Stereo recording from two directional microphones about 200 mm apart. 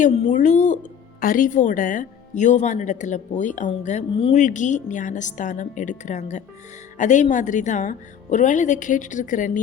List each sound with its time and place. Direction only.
0.0 s speech: 35° left (ahead or behind)